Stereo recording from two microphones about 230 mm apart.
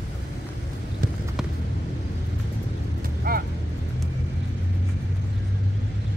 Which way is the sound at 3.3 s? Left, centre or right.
Right.